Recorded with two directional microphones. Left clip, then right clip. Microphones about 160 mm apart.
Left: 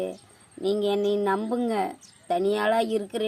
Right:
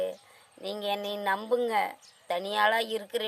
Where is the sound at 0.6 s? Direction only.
35° right (ahead or behind).